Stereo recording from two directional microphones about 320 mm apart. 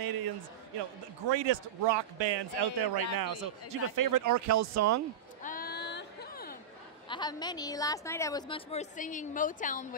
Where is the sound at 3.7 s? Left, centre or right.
Right.